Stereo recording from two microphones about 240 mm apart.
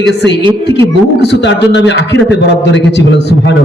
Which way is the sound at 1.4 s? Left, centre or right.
Left.